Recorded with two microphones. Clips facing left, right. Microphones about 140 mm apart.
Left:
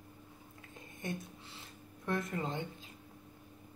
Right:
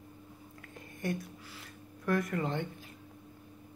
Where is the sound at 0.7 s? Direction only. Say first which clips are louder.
Right 5 dB; 20° left (ahead or behind).